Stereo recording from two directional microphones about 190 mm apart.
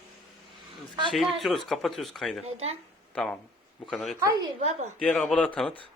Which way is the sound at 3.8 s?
Centre (ahead or behind).